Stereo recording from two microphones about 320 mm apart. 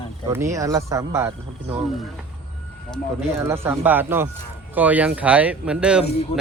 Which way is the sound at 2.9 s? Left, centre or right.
Centre.